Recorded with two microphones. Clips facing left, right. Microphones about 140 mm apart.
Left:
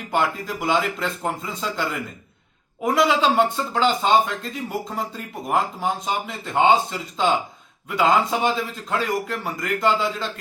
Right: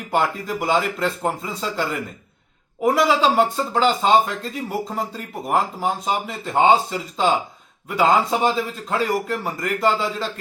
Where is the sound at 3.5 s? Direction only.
35° right (ahead or behind).